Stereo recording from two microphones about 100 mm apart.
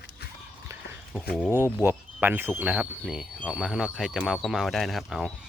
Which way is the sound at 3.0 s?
5° right (ahead or behind).